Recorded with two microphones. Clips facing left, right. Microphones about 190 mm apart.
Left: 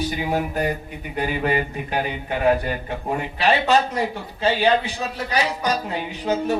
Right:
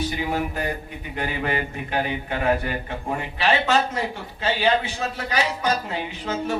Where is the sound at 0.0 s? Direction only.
15° left (ahead or behind).